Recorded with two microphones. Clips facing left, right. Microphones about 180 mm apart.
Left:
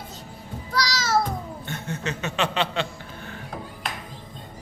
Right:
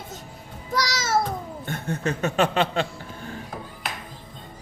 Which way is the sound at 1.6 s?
50° right (ahead or behind).